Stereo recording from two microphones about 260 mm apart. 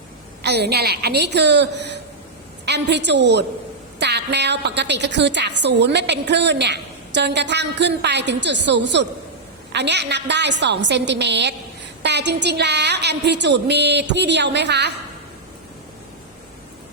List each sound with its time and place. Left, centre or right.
0.4 s a woman's voice: right